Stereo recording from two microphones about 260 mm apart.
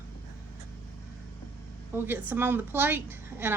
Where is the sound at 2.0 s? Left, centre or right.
Centre.